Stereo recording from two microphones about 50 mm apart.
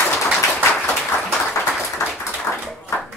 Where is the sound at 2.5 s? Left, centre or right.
Left.